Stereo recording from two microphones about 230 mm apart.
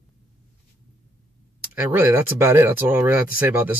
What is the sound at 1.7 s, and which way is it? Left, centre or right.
Speech, centre.